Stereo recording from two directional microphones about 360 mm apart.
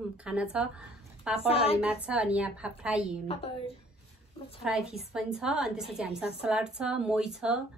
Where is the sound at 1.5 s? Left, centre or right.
Centre.